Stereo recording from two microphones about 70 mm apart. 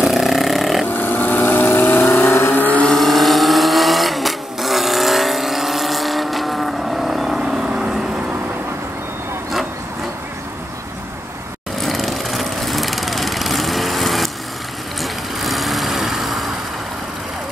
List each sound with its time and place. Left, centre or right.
0.0 s a sound: centre
0.9 s vehicle: left
2.9 s vehicle: centre
11.8 s lawn mower: centre
15.0 s vehicle: centre